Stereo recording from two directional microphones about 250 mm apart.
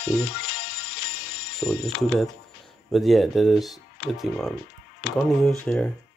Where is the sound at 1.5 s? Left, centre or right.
Centre.